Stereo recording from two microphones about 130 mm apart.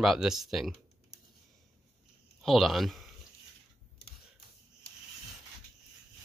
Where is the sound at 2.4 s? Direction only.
Centre (ahead or behind).